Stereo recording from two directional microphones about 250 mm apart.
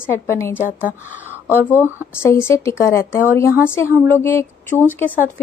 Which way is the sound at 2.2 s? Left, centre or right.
Centre.